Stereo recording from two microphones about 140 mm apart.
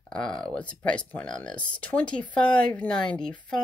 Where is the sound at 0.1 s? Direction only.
5° left (ahead or behind).